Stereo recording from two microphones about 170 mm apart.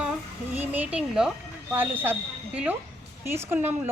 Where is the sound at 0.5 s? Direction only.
10° right (ahead or behind).